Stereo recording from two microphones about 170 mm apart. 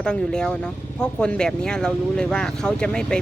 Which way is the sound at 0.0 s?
5° left (ahead or behind).